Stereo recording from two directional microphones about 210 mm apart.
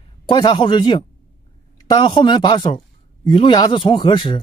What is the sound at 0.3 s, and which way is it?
Speech, 20° left (ahead or behind).